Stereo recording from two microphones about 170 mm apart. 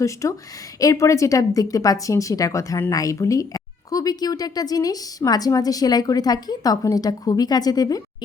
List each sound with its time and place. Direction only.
0.0 s speech: 20° left (ahead or behind)